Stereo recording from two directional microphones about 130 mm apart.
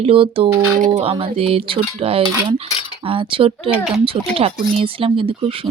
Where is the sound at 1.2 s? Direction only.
45° right (ahead or behind).